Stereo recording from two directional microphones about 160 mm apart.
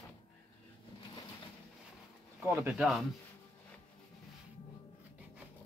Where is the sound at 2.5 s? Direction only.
15° right (ahead or behind).